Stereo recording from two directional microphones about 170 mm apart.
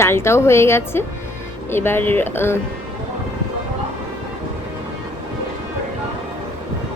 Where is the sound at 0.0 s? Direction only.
15° left (ahead or behind).